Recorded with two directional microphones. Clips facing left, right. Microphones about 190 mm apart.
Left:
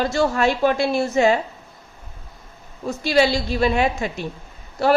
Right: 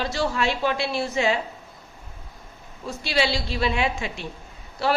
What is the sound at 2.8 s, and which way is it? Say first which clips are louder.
A woman's voice: left 7 dB; 45° left (ahead or behind).